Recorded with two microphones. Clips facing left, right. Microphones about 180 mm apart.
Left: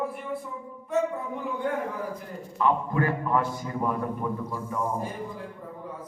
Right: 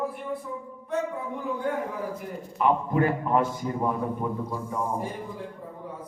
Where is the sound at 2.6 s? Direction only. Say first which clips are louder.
Right 2 dB; 20° right (ahead or behind).